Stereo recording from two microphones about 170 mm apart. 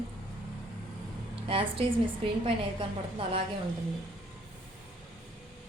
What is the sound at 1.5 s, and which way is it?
A woman's voice, 30° right (ahead or behind).